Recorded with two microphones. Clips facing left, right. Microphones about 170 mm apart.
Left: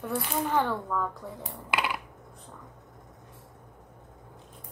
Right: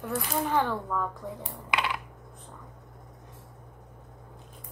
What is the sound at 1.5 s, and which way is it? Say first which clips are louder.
Computer keyboard: left 1 dB; 5° left (ahead or behind).